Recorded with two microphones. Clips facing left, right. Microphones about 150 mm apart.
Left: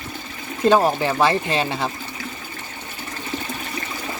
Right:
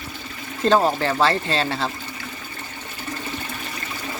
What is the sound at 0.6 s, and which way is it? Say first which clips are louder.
Speech: left 2 dB; 10° left (ahead or behind).